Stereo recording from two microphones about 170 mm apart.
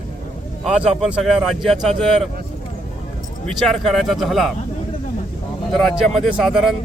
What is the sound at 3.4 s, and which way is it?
Speech, centre (ahead or behind).